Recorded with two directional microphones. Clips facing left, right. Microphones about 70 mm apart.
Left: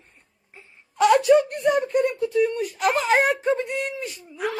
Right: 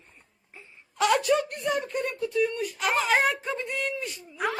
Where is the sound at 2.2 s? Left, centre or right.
Left.